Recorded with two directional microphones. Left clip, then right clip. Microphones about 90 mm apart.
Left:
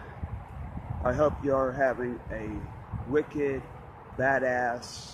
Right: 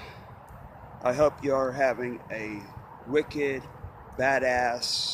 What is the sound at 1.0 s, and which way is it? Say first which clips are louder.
Speech: right 2 dB; 5° right (ahead or behind).